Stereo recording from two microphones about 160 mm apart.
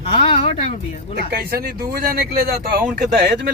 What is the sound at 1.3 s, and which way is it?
Speech, 70° right (ahead or behind).